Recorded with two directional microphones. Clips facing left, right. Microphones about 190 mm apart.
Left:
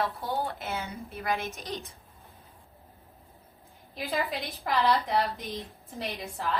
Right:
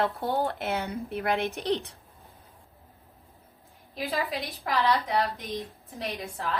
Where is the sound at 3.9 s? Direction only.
Centre (ahead or behind).